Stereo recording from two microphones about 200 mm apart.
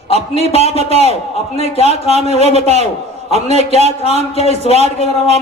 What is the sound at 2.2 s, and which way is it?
Speech, 35° right (ahead or behind).